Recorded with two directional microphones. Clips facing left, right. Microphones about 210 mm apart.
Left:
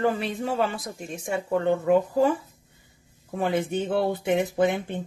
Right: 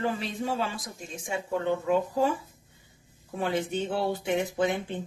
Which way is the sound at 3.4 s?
55° left (ahead or behind).